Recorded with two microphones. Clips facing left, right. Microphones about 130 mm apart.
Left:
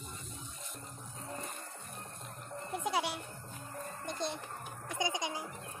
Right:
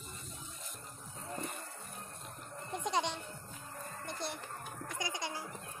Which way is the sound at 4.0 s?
20° left (ahead or behind).